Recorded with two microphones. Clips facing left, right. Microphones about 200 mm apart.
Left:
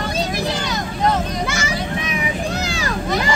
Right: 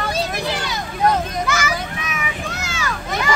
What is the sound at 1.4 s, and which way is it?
Children playing, 30° left (ahead or behind).